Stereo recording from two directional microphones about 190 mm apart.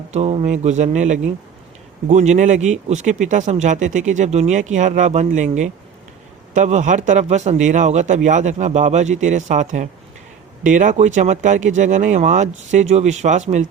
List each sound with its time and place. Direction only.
0.1 s speech: 35° right (ahead or behind)